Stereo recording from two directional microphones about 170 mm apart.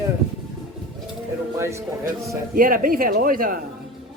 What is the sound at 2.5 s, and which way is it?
Speech, 55° right (ahead or behind).